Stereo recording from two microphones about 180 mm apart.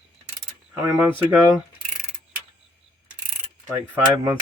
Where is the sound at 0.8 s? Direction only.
15° right (ahead or behind).